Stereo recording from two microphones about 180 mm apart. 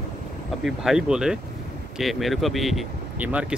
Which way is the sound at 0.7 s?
5° right (ahead or behind).